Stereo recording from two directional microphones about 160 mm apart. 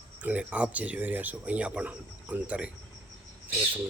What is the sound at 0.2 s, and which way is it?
Speech, 10° right (ahead or behind).